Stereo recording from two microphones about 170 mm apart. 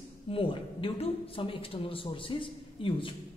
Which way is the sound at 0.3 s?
30° left (ahead or behind).